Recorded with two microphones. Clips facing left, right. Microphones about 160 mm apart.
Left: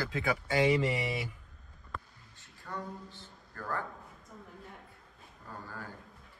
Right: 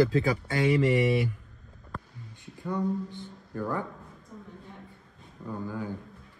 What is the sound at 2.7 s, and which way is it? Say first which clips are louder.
Speech: right 11 dB; 20° right (ahead or behind).